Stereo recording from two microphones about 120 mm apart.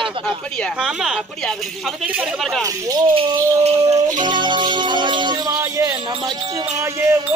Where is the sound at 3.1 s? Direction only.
65° right (ahead or behind).